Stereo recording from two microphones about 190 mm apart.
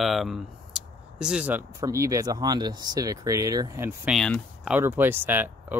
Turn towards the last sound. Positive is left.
turn(degrees=-10)  # may be behind; listen again after turning